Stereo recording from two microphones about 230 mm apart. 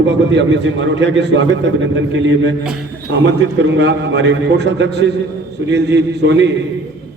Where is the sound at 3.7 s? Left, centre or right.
Right.